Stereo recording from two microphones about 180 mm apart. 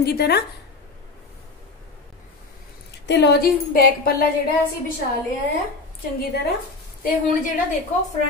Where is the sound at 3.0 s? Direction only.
70° left (ahead or behind); by 4.1 s 55° left (ahead or behind).